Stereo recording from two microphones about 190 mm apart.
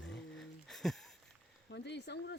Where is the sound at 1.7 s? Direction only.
65° left (ahead or behind).